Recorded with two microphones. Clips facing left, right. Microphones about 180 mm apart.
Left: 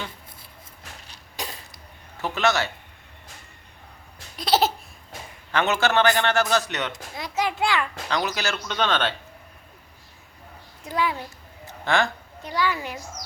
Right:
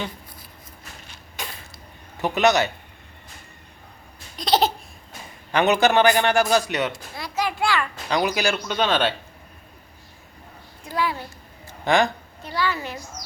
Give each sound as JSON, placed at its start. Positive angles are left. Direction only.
{"t": 1.0, "sound": "a sound", "side_deg": 35}
{"t": 2.1, "sound": "a man's voice", "side_deg": -15}
{"t": 4.4, "sound": "baby laughter", "side_deg": 5}
{"t": 5.5, "sound": "a man's voice", "side_deg": -15}
{"t": 6.9, "sound": "a sound", "side_deg": 20}
{"t": 8.1, "sound": "a man's voice", "side_deg": -15}
{"t": 10.8, "sound": "a child's voice", "side_deg": 20}
{"t": 11.9, "sound": "a man's voice", "side_deg": -15}
{"t": 12.4, "sound": "a woman's voice", "side_deg": 15}